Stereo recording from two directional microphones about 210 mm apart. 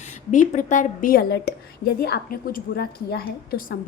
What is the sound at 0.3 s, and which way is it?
A woman's voice, 35° left (ahead or behind).